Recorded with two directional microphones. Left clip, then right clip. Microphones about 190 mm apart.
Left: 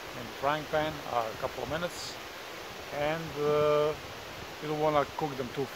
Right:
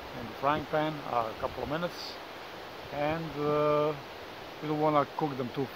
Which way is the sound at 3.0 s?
5° left (ahead or behind).